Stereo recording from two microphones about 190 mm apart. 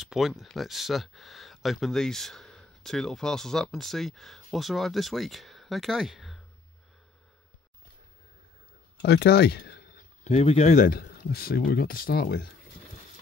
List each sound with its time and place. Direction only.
0.0 s speech: centre (ahead or behind)
9.0 s speech: 55° left (ahead or behind)
10.2 s speech: 35° left (ahead or behind); by 12.4 s 55° left (ahead or behind)